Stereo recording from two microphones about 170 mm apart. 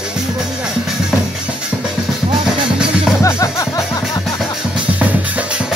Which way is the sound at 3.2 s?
15° left (ahead or behind).